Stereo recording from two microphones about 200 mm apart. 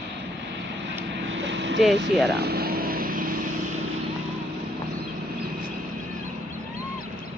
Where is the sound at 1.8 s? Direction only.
Centre (ahead or behind).